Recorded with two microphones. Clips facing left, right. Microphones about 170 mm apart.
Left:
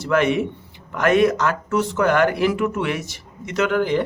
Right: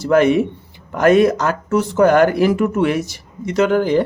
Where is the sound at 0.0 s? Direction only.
35° right (ahead or behind).